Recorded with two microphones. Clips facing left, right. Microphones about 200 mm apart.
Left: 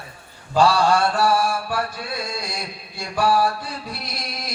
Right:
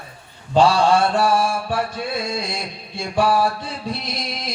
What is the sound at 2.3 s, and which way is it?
Chant, 25° right (ahead or behind).